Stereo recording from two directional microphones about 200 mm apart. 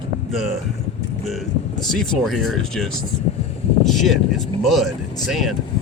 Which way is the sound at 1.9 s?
Centre (ahead or behind).